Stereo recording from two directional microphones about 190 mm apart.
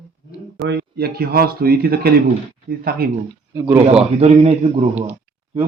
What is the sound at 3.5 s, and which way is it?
Speech, 15° right (ahead or behind).